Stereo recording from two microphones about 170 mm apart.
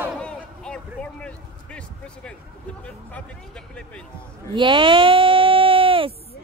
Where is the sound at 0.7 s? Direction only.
5° left (ahead or behind).